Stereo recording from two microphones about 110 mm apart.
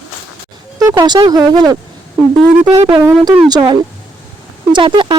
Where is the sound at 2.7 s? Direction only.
60° right (ahead or behind).